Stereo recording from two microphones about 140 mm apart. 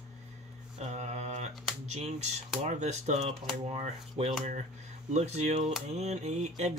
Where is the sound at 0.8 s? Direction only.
55° right (ahead or behind).